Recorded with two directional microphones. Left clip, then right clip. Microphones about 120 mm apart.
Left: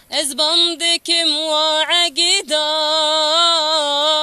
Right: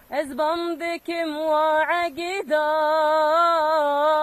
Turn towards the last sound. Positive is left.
turn(degrees=30)  # may be behind; listen again after turning